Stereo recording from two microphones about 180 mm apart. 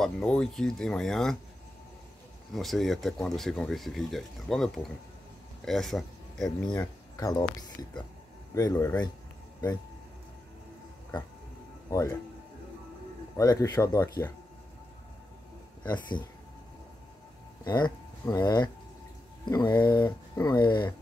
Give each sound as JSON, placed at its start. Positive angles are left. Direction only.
{"t": 0.0, "sound": "speech", "side_deg": 5}
{"t": 2.5, "sound": "speech", "side_deg": 0}
{"t": 7.2, "sound": "speech", "side_deg": 20}
{"t": 8.5, "sound": "speech", "side_deg": 20}
{"t": 11.9, "sound": "speech", "side_deg": 15}
{"t": 13.4, "sound": "speech", "side_deg": 20}
{"t": 17.6, "sound": "speech", "side_deg": 20}